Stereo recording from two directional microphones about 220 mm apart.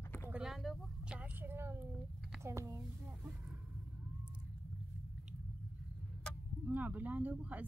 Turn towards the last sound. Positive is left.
turn(degrees=-5)  # may be behind; listen again after turning